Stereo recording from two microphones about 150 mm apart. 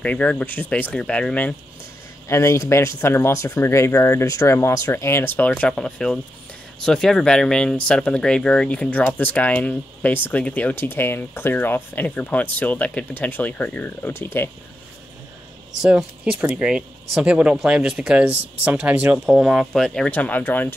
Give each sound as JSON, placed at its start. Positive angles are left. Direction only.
{"t": 0.0, "sound": "speech", "side_deg": 10}
{"t": 2.2, "sound": "speech", "side_deg": 20}
{"t": 15.8, "sound": "speech", "side_deg": -5}